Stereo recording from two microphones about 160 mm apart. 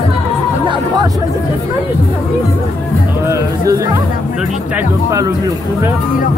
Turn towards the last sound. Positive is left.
turn(degrees=-20)  # may be behind; listen again after turning